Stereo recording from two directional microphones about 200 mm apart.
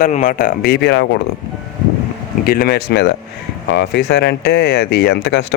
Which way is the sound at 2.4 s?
45° left (ahead or behind).